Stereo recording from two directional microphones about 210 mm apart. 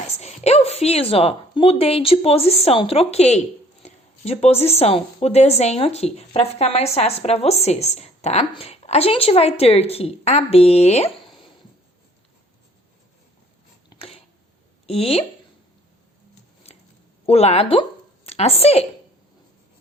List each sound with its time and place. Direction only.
0.2 s a woman's voice: 30° left (ahead or behind)
13.9 s a sound: 25° left (ahead or behind)
14.8 s a woman's voice: 25° left (ahead or behind)
17.2 s a woman's voice: 30° left (ahead or behind)